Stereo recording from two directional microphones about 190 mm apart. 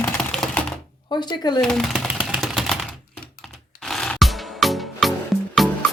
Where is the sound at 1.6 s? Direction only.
5° left (ahead or behind).